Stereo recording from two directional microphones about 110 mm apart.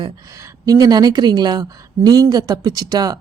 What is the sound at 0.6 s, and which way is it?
A woman's voice, 35° right (ahead or behind).